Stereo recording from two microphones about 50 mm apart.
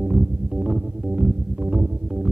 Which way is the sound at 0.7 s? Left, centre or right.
Right.